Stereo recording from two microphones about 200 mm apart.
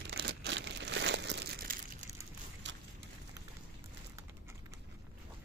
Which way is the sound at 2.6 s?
65° right (ahead or behind).